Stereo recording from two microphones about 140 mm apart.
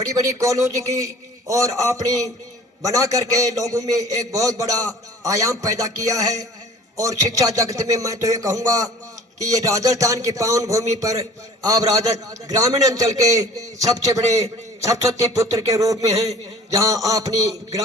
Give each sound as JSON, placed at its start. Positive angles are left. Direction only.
{"t": 0.0, "sound": "a man's voice", "side_deg": -25}